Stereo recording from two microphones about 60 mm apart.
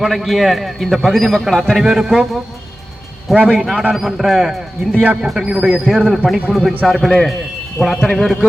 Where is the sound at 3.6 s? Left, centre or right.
Centre.